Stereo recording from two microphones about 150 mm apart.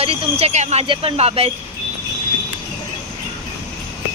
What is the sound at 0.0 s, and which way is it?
Speech, 40° right (ahead or behind).